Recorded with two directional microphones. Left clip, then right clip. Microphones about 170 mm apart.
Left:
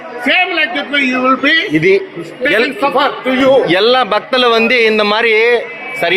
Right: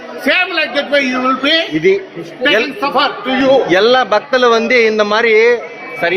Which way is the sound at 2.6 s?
15° left (ahead or behind).